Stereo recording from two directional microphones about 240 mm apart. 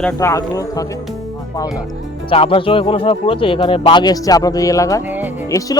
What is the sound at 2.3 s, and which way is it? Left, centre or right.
A man's voice, left.